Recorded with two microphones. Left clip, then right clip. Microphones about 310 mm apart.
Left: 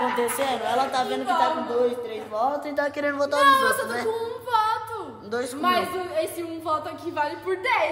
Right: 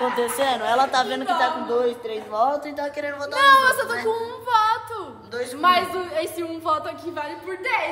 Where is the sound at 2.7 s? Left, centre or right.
Left.